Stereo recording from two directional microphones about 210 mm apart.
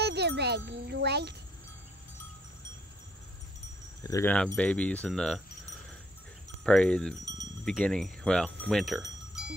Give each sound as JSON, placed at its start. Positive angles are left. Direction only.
{"t": 0.0, "sound": "jingle", "side_deg": -50}
{"t": 4.0, "sound": "speech", "side_deg": 15}
{"t": 6.6, "sound": "speech", "side_deg": 5}
{"t": 8.6, "sound": "music", "side_deg": 0}